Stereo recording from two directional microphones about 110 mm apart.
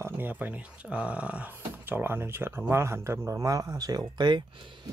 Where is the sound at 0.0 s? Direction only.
15° right (ahead or behind); by 4.8 s 45° right (ahead or behind).